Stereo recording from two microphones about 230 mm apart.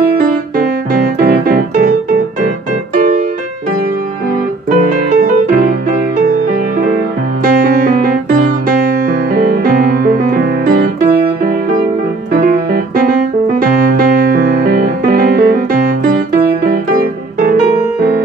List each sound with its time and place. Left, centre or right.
0.6 s piano: right
4.6 s music: right
7.4 s music: right
12.3 s music: right